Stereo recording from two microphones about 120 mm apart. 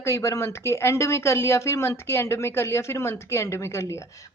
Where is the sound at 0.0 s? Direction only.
25° left (ahead or behind).